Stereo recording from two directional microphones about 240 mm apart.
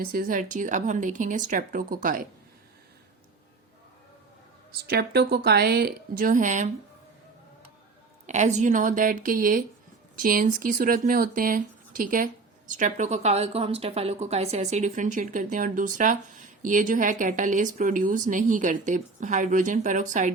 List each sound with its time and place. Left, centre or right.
0.0 s speech: right
4.7 s speech: right
8.3 s speech: right